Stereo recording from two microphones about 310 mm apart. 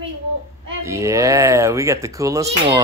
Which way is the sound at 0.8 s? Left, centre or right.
Centre.